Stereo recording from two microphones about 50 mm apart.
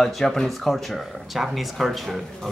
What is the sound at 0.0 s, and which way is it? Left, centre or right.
Speech, centre.